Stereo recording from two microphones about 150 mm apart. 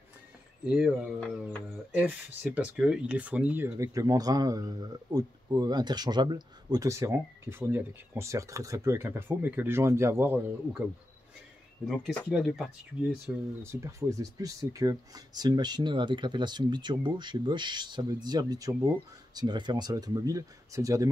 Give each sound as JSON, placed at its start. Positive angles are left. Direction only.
{"t": 0.7, "sound": "speech", "side_deg": -5}
{"t": 3.6, "sound": "speech", "side_deg": -20}
{"t": 11.8, "sound": "speech", "side_deg": 5}
{"t": 13.6, "sound": "speech", "side_deg": -20}